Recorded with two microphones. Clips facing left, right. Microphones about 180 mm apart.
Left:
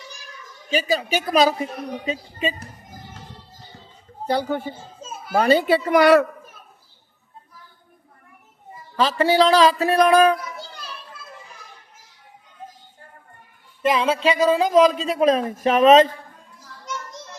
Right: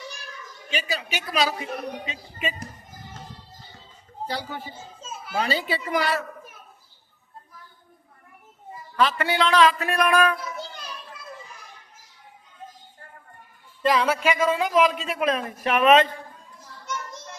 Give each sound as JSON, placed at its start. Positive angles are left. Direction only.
{"t": 0.7, "sound": "a woman's voice", "side_deg": 40}
{"t": 2.0, "sound": "speech", "side_deg": 30}
{"t": 4.3, "sound": "a woman's voice", "side_deg": 55}
{"t": 9.0, "sound": "speech", "side_deg": 30}
{"t": 10.6, "sound": "children playing", "side_deg": -20}
{"t": 13.8, "sound": "speech", "side_deg": 20}